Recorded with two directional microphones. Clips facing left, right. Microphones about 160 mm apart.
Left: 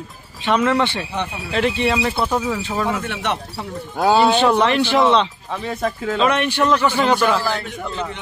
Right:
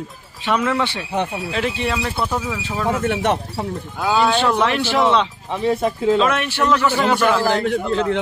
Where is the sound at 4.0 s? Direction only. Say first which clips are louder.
Left 3 dB; 35° left (ahead or behind).